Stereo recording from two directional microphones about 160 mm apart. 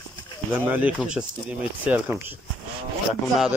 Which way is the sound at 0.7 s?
10° right (ahead or behind).